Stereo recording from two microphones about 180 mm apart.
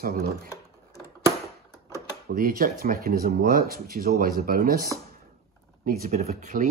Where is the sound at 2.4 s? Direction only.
55° right (ahead or behind).